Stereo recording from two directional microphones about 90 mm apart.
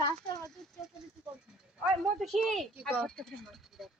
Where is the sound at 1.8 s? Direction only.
Centre (ahead or behind).